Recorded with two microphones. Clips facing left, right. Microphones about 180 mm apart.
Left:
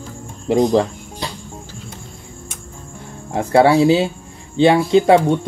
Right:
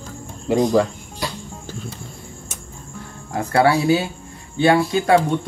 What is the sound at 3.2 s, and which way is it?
Speech, 25° left (ahead or behind).